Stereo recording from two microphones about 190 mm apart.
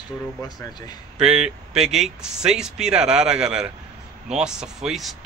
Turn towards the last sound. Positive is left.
turn(degrees=0)  # may be behind; listen again after turning